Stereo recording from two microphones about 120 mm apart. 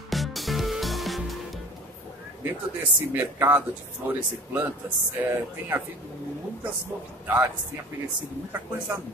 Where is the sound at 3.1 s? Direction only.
15° right (ahead or behind).